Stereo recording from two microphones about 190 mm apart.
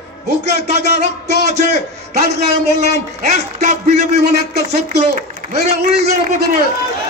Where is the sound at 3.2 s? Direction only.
35° right (ahead or behind).